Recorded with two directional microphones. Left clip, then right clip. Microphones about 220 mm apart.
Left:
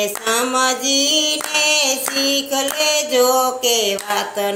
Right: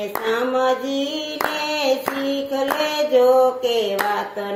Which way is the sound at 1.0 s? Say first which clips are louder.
Left 8 dB; 65° left (ahead or behind).